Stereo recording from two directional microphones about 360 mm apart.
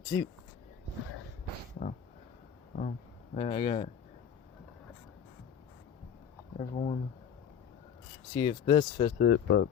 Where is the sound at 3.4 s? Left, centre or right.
Centre.